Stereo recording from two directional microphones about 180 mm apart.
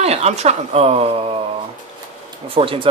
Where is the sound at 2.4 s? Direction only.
30° right (ahead or behind).